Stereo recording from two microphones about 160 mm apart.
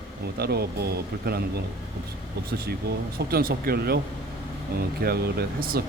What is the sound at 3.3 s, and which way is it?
Speech, 70° right (ahead or behind).